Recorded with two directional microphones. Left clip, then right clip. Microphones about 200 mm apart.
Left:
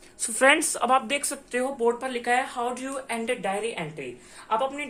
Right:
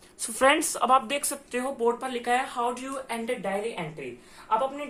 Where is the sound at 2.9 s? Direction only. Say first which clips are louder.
Left 2 dB; 25° left (ahead or behind).